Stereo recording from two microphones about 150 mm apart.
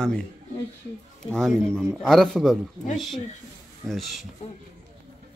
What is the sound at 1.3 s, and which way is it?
Speech, 5° left (ahead or behind).